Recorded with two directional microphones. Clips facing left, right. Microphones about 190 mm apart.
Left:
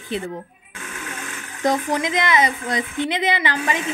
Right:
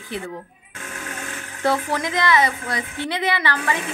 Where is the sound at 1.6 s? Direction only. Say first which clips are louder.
Left 1 dB; 15° left (ahead or behind).